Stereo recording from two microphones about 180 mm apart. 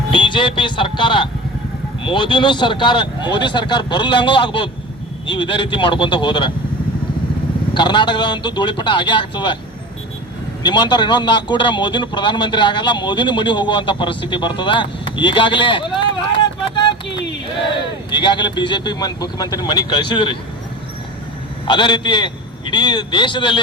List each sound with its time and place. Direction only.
0.1 s a man's voice: 25° left (ahead or behind)
7.7 s a man's voice: 25° left (ahead or behind)
10.6 s a man's voice: 25° left (ahead or behind)
17.1 s a sound: 80° left
18.1 s a man's voice: 25° left (ahead or behind)
21.7 s a man's voice: 25° left (ahead or behind)